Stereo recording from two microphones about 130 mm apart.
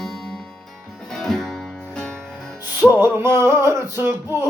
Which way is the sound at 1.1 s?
5° left (ahead or behind).